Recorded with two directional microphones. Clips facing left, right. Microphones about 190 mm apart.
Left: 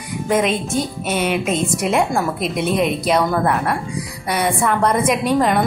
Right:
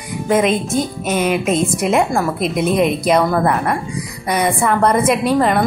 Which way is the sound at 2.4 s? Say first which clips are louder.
Right 3 dB; 40° right (ahead or behind).